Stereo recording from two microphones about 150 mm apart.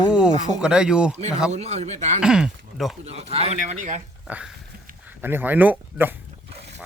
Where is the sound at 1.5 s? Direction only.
45° right (ahead or behind).